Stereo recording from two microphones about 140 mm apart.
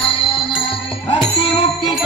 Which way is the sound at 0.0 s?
40° left (ahead or behind).